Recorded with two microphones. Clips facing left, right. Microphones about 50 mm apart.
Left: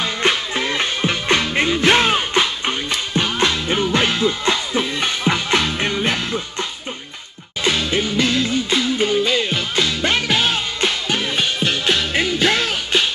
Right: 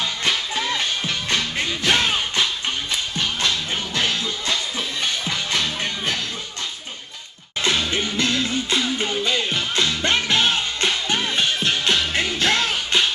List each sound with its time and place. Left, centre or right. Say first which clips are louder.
0.0 s music: left 4 dB; left
7.6 s music: left 3 dB; centre